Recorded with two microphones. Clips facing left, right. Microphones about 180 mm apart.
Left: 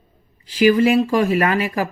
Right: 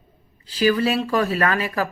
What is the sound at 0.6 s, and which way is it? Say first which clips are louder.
Speech: left 5 dB; 20° left (ahead or behind).